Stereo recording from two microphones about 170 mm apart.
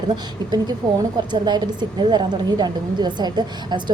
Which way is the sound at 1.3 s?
25° right (ahead or behind).